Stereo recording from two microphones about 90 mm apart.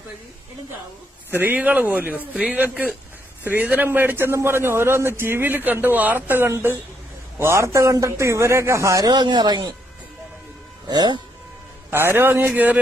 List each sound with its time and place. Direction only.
1.4 s a man's voice: 20° right (ahead or behind)
9.0 s speech: 50° right (ahead or behind)
10.9 s speech: 50° right (ahead or behind)
11.9 s a man's voice: 25° right (ahead or behind)